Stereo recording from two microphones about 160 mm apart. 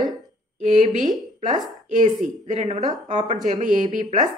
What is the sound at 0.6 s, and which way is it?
Speech, 50° right (ahead or behind).